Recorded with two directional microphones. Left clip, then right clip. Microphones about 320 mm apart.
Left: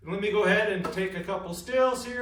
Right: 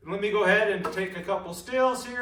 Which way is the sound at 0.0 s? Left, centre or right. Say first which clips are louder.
Right 1 dB; centre.